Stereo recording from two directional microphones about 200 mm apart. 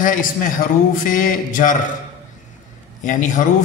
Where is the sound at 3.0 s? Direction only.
40° left (ahead or behind).